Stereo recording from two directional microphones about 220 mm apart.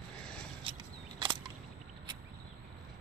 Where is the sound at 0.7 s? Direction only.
25° right (ahead or behind).